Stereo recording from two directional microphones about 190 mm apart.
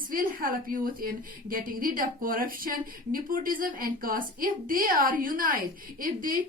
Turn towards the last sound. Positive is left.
turn(degrees=-45)  # may be behind; listen again after turning